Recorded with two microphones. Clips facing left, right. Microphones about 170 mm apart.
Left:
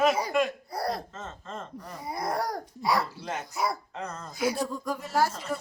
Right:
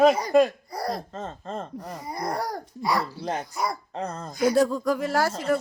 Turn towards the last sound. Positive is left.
turn(degrees=-90)